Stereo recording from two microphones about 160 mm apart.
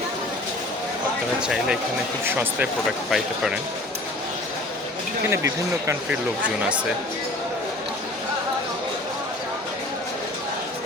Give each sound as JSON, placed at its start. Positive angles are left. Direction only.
{"t": 1.4, "sound": "speech", "side_deg": -5}
{"t": 5.3, "sound": "speech", "side_deg": -20}